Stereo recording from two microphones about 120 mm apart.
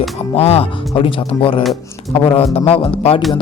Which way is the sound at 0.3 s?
55° left (ahead or behind).